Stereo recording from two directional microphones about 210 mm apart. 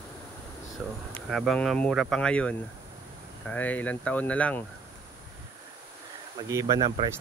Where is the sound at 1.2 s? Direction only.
Centre (ahead or behind).